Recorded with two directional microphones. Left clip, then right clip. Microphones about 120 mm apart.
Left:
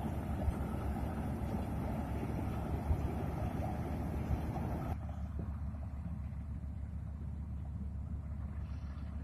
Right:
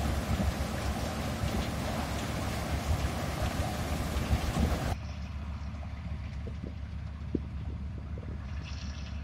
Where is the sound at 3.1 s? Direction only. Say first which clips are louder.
Right 7 dB; 35° right (ahead or behind).